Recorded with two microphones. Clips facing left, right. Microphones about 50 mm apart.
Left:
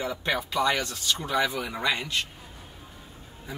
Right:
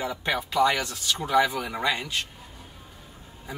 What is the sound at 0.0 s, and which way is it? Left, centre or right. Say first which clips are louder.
Speech: right 1 dB; centre.